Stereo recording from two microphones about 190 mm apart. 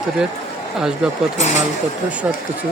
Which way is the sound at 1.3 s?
40° left (ahead or behind).